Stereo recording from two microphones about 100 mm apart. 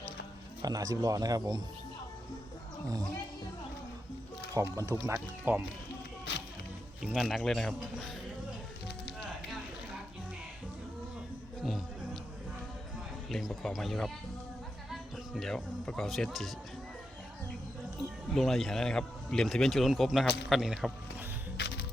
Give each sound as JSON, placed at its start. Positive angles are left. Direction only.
{"t": 0.6, "sound": "speech", "side_deg": -35}
{"t": 4.5, "sound": "speech", "side_deg": -35}
{"t": 5.0, "sound": "speech", "side_deg": -20}
{"t": 7.0, "sound": "speech", "side_deg": -5}
{"t": 13.3, "sound": "speech", "side_deg": 5}
{"t": 18.3, "sound": "speech", "side_deg": 0}